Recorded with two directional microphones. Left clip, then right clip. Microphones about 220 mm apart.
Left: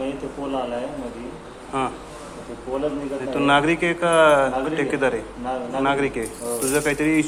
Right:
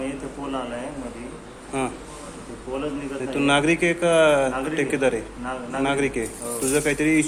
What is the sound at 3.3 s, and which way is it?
A man's voice, 20° right (ahead or behind).